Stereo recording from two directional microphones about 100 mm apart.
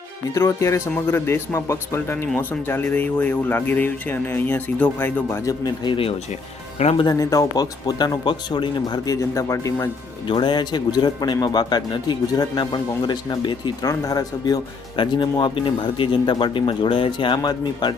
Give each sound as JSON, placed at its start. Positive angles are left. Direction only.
{"t": 0.3, "sound": "speech", "side_deg": 30}
{"t": 5.5, "sound": "a man's voice", "side_deg": 45}
{"t": 6.7, "sound": "speech", "side_deg": 90}
{"t": 7.0, "sound": "a man's voice", "side_deg": 35}
{"t": 9.3, "sound": "speech", "side_deg": 30}
{"t": 10.2, "sound": "a man's voice", "side_deg": 50}
{"t": 13.8, "sound": "speech", "side_deg": 35}
{"t": 14.9, "sound": "a man's voice", "side_deg": 50}